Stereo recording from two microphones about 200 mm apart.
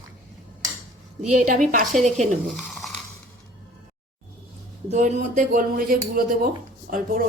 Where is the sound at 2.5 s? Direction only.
Centre (ahead or behind).